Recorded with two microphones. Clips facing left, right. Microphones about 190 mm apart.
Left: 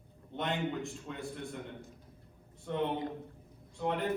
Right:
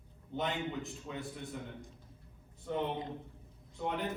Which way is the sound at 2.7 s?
Centre (ahead or behind).